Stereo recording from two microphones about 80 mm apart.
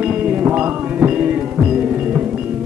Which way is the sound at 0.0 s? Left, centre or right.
Centre.